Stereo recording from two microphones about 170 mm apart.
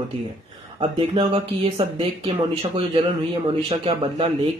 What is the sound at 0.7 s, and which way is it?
Speech, 35° right (ahead or behind).